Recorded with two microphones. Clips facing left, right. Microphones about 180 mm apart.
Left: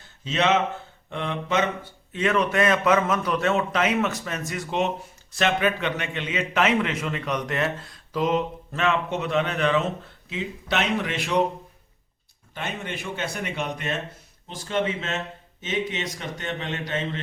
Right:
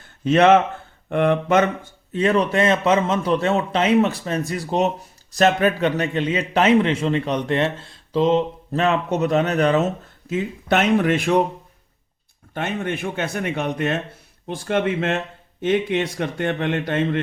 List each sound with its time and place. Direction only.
0.3 s speech: 55° right (ahead or behind)
2.1 s a man's voice: 35° right (ahead or behind); by 11.3 s 50° right (ahead or behind)
12.5 s speech: 55° right (ahead or behind)